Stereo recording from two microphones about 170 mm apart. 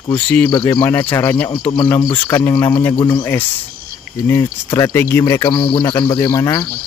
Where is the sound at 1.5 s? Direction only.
30° left (ahead or behind).